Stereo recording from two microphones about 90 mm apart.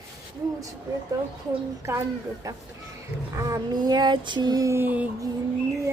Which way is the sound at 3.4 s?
50° right (ahead or behind).